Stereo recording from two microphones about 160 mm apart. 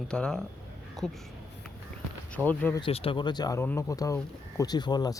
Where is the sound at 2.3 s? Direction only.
10° left (ahead or behind).